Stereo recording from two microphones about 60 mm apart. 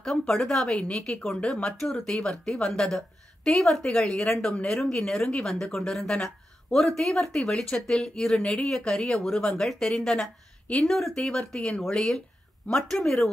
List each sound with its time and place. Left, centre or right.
0.0 s a woman's voice: centre